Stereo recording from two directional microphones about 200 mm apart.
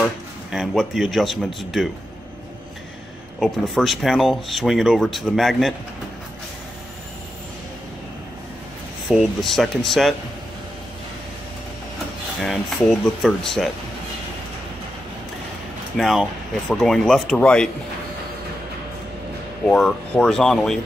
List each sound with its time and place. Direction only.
0.5 s speech: centre (ahead or behind)
3.3 s speech: centre (ahead or behind)
9.1 s speech: centre (ahead or behind)
12.4 s speech: centre (ahead or behind)
16.0 s speech: centre (ahead or behind)
19.6 s speech: 5° left (ahead or behind)